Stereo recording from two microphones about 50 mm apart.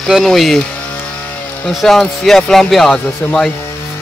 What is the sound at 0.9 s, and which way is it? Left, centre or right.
Vehicle, left.